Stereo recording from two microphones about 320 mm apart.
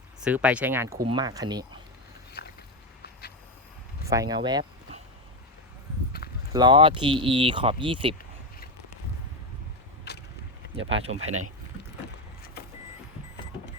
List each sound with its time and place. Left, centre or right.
0.2 s speech: centre
3.0 s vehicle: left
4.0 s speech: centre
6.5 s speech: centre
10.1 s vehicle: left
10.8 s speech: right